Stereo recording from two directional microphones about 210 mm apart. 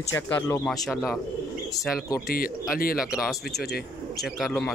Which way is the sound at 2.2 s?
45° left (ahead or behind).